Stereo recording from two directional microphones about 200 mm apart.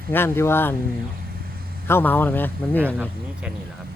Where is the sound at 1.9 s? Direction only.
10° left (ahead or behind).